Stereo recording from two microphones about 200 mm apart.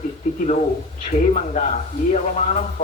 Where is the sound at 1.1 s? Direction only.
35° left (ahead or behind).